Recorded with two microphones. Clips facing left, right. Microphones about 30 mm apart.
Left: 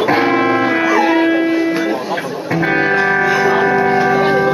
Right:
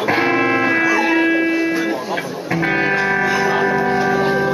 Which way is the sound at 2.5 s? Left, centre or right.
Centre.